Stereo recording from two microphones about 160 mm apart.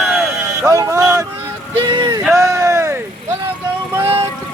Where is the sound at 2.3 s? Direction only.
20° right (ahead or behind).